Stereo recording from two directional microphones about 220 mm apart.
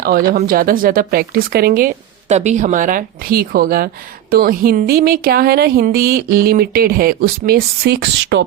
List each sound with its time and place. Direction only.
0.3 s speech: 40° right (ahead or behind)
2.3 s speech: 30° right (ahead or behind); by 8.4 s 50° right (ahead or behind)